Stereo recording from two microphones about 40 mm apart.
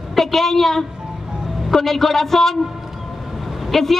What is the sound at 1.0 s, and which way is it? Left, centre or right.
Vehicle, right.